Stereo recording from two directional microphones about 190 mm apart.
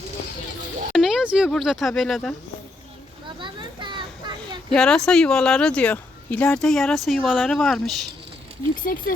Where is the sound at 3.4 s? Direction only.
25° right (ahead or behind).